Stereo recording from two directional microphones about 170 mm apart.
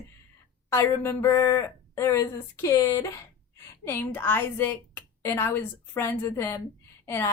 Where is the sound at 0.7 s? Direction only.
15° left (ahead or behind).